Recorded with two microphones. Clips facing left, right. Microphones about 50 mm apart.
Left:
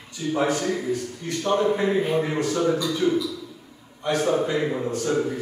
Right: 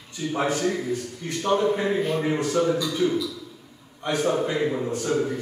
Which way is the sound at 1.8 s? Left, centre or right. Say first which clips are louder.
Left 2 dB; centre.